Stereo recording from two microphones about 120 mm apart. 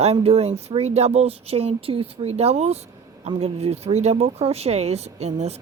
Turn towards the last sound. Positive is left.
turn(degrees=-65)  # may be behind; listen again after turning